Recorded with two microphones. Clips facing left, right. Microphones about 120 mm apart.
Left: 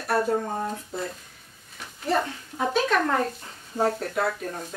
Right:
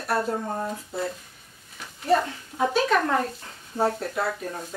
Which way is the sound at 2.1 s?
Centre (ahead or behind).